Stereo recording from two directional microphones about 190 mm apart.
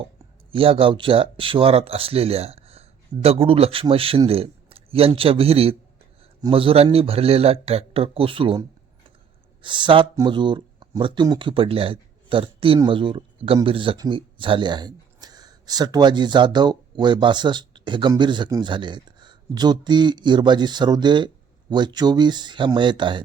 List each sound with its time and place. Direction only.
0.5 s speech: 30° right (ahead or behind)